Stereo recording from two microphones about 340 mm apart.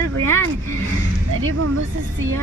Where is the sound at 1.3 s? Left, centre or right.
Right.